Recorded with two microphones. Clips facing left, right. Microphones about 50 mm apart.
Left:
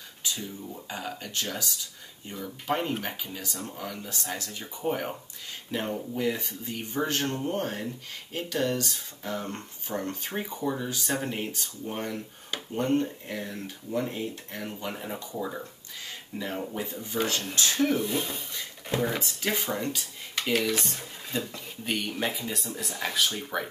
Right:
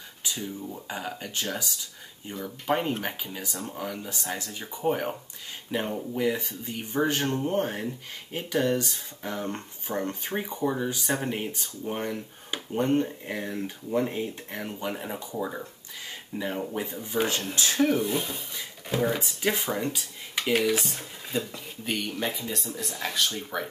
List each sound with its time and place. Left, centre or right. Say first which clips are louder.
0.3 s speech: right 2 dB; centre
16.8 s speech: right 2 dB; centre
17.7 s speech: right 3 dB; centre